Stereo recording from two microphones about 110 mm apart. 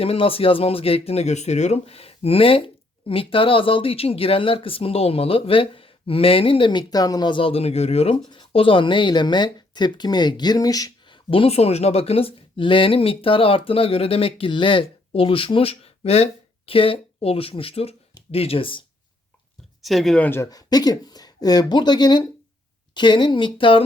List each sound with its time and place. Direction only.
0.0 s speech: 60° left (ahead or behind)
8.3 s speech: 50° left (ahead or behind)
11.1 s speech: 55° left (ahead or behind)
19.8 s speech: centre (ahead or behind)
20.2 s speech: 20° left (ahead or behind)
20.5 s speech: 35° left (ahead or behind); by 23.8 s 50° left (ahead or behind)